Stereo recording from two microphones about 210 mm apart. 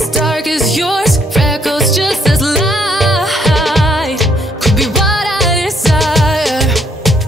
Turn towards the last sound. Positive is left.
turn(degrees=0)  # may be behind; listen again after turning